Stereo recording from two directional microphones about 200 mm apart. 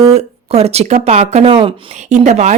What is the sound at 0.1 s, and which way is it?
Speech, 30° right (ahead or behind).